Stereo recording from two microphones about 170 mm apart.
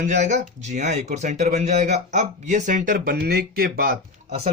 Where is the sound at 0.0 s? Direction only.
45° right (ahead or behind); by 3.9 s 60° right (ahead or behind).